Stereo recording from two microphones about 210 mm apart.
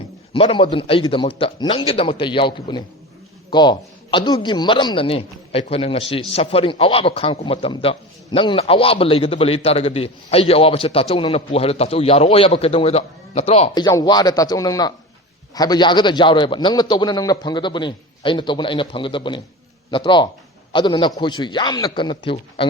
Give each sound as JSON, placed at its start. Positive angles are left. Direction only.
{"t": 0.3, "sound": "a man's voice", "side_deg": 25}